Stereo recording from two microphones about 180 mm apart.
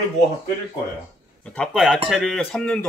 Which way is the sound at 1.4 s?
5° left (ahead or behind).